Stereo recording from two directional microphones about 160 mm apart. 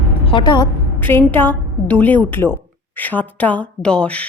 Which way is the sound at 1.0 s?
15° left (ahead or behind).